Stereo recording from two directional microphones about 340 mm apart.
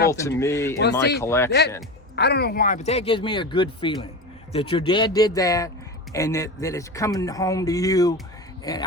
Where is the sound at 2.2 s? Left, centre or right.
Left.